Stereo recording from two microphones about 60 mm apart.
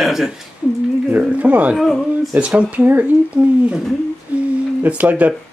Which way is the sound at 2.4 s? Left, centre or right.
Right.